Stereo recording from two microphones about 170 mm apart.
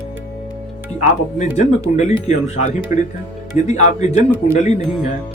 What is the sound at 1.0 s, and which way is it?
Speech, 45° left (ahead or behind).